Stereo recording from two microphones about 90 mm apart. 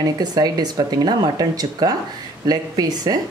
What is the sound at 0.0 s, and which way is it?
Speech, 45° right (ahead or behind).